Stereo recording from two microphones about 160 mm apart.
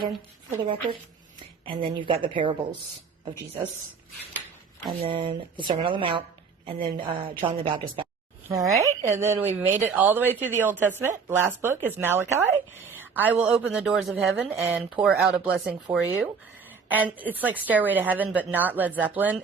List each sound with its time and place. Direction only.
0.6 s speech: 35° right (ahead or behind)
4.9 s speech: 35° right (ahead or behind)
8.4 s speech: 20° right (ahead or behind)